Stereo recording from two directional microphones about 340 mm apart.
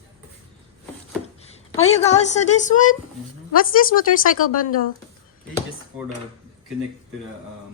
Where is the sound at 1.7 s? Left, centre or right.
Centre.